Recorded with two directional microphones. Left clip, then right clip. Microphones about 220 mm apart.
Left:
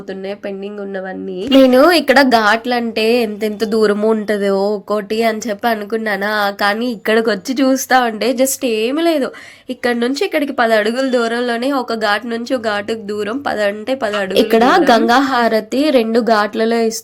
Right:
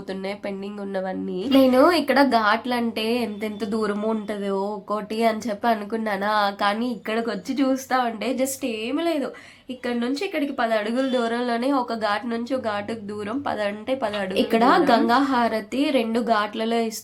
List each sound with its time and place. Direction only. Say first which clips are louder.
1.5 s speech: left 8 dB; 20° left (ahead or behind)
14.3 s speech: left 7 dB; 30° left (ahead or behind)